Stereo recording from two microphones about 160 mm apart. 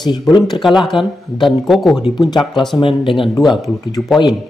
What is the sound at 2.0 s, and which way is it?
Speech, 25° left (ahead or behind).